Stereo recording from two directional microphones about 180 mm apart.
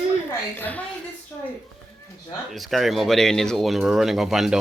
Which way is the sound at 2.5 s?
Centre (ahead or behind).